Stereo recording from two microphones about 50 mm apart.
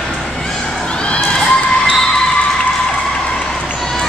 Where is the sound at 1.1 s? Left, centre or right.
Left.